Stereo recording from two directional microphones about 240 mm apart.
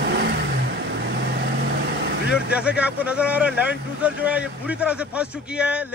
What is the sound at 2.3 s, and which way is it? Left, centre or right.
A man's voice, centre.